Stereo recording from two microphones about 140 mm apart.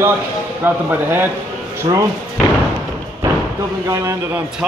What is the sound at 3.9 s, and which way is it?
Speech, 20° right (ahead or behind).